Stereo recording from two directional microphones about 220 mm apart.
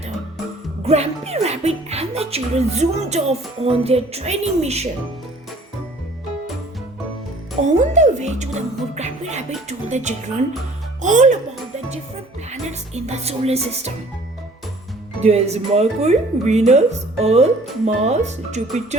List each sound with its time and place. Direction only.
0.9 s speech: 30° right (ahead or behind)
7.6 s speech: 30° right (ahead or behind)
12.5 s speech: 30° right (ahead or behind)
15.2 s speech: 30° right (ahead or behind)